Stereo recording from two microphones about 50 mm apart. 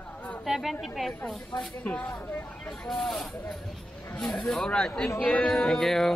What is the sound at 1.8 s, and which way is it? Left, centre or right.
Speech, left.